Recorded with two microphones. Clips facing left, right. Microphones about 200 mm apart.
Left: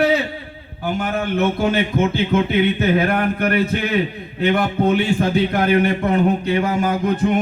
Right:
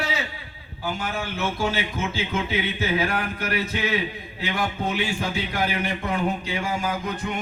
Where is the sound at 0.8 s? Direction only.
60° left (ahead or behind).